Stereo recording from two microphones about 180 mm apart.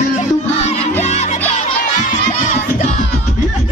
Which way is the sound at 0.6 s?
35° left (ahead or behind).